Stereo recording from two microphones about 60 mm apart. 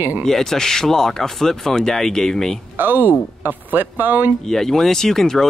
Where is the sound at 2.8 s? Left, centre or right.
Right.